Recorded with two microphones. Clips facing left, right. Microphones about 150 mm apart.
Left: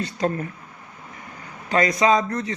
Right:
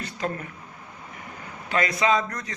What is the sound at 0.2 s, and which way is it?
Speech, 35° left (ahead or behind).